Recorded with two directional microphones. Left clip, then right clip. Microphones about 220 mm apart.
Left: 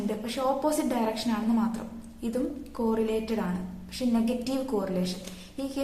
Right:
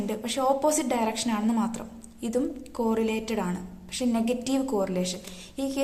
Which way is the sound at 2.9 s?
45° right (ahead or behind).